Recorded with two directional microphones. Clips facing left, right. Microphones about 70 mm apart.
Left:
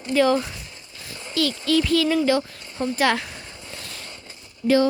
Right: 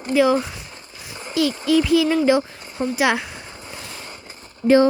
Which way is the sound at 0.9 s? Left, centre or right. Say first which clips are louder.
Right 3 dB; centre.